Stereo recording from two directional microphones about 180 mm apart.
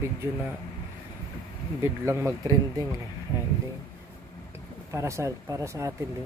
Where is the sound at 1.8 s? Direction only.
15° right (ahead or behind).